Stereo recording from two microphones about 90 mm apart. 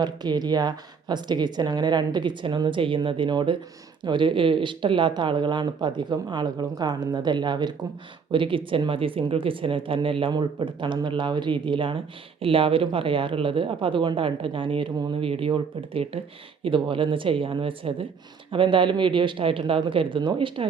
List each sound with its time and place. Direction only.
0.0 s speech: 50° right (ahead or behind)
8.3 s speech: 75° right (ahead or behind)
10.3 s speech: 60° right (ahead or behind)
12.4 s speech: 90° right
16.6 s speech: 70° right (ahead or behind)
18.5 s speech: 65° right (ahead or behind)